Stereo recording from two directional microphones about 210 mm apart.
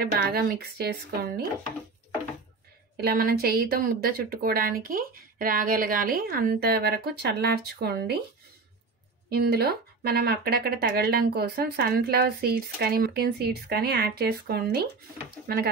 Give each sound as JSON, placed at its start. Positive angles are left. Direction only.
{"t": 0.0, "sound": "speech", "side_deg": -45}
{"t": 3.0, "sound": "speech", "side_deg": -45}
{"t": 9.3, "sound": "speech", "side_deg": -50}